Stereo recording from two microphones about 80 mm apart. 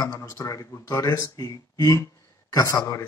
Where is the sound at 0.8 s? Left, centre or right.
Left.